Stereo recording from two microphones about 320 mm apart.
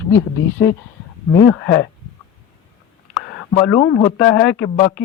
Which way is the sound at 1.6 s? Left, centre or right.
Left.